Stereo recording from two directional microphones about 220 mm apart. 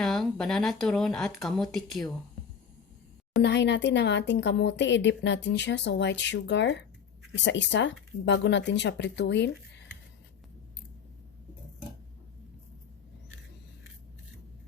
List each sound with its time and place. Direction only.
0.0 s speech: 5° left (ahead or behind)
3.4 s speech: 55° left (ahead or behind)